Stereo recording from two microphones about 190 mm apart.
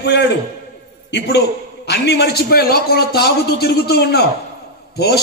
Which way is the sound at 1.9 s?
60° left (ahead or behind).